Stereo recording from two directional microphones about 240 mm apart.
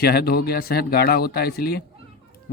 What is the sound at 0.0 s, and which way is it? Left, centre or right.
Speech, left.